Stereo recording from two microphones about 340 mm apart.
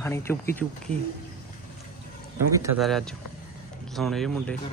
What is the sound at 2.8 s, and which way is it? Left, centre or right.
A man's voice, centre.